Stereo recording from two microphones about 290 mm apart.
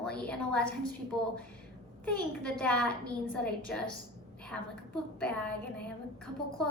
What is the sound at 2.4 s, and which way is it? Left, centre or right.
A woman's voice, centre.